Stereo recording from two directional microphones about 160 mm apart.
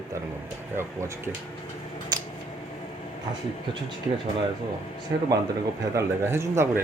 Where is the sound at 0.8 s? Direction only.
15° right (ahead or behind).